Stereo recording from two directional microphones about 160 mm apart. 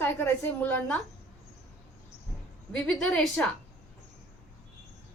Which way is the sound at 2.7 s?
5° left (ahead or behind).